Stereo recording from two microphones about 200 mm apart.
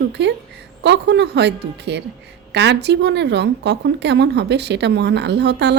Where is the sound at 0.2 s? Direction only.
60° right (ahead or behind).